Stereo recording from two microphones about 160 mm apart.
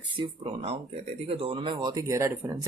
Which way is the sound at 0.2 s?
35° right (ahead or behind).